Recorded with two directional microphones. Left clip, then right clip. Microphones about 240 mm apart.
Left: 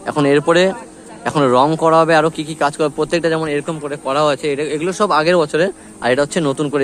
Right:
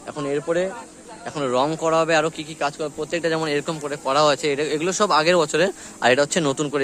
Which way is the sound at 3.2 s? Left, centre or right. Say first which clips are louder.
Left 5 dB; centre.